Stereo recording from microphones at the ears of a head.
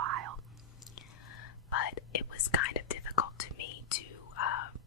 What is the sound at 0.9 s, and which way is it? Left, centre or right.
Whispering, left.